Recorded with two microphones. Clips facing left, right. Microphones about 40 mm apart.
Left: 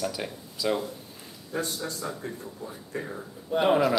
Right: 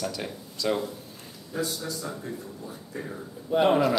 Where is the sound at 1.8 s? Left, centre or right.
Left.